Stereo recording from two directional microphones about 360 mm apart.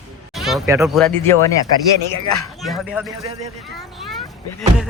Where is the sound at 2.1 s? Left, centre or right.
Left.